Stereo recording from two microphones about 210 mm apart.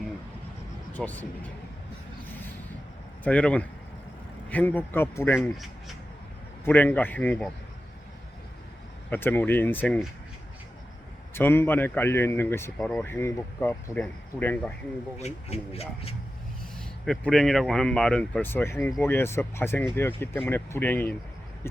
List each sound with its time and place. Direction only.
0.9 s speech: 5° left (ahead or behind)
3.2 s speech: 5° left (ahead or behind)
6.7 s speech: 10° left (ahead or behind)
9.0 s speech: 10° left (ahead or behind)
11.3 s speech: 10° left (ahead or behind)
15.2 s speech: 30° left (ahead or behind)
16.7 s speech: centre (ahead or behind)